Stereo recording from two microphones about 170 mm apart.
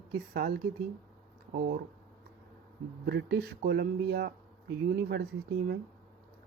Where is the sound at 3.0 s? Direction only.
75° right (ahead or behind).